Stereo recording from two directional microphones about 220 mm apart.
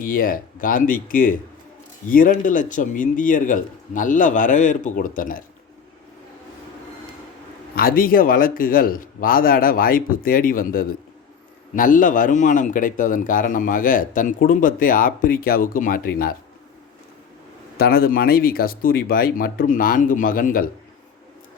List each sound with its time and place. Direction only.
0.0 s speech: 40° left (ahead or behind)
7.8 s speech: 40° left (ahead or behind)
17.7 s speech: 45° left (ahead or behind)